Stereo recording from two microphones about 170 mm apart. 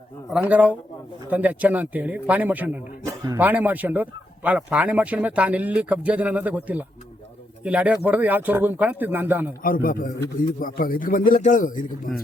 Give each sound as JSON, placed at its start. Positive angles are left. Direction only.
{"t": 0.3, "sound": "speech", "side_deg": -5}
{"t": 9.6, "sound": "a man's voice", "side_deg": 55}